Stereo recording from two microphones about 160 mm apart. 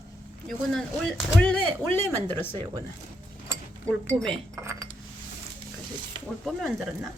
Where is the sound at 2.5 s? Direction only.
35° right (ahead or behind).